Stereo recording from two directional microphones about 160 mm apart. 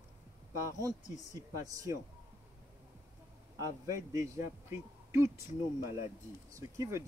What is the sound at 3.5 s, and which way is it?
A man's voice, 20° right (ahead or behind).